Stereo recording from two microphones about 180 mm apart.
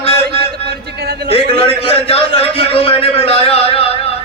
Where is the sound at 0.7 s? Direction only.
65° right (ahead or behind).